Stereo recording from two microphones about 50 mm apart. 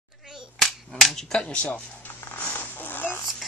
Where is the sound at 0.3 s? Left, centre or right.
Centre.